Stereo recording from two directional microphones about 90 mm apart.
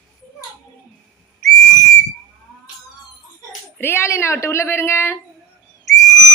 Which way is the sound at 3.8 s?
25° left (ahead or behind).